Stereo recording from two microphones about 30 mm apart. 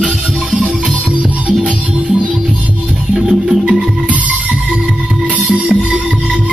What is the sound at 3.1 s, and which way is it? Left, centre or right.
Music, centre.